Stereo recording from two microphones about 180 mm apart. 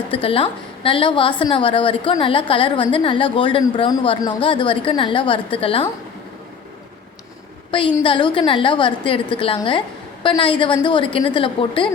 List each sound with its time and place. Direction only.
0.1 s a woman's voice: 30° left (ahead or behind)
7.7 s a woman's voice: 30° left (ahead or behind)